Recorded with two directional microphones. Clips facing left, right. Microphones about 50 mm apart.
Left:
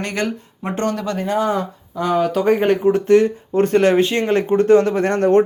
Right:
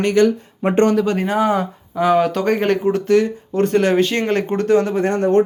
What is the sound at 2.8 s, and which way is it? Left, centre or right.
Speech, left.